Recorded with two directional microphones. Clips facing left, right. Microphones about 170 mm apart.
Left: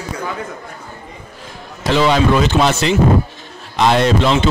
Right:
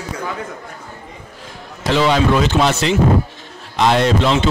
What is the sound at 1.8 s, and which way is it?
Speech, 15° left (ahead or behind).